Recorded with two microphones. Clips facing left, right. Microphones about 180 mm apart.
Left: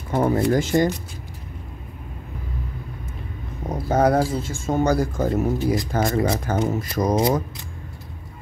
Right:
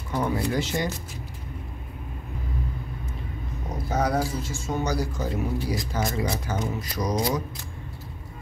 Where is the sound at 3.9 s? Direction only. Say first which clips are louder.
Left 7 dB; 55° left (ahead or behind).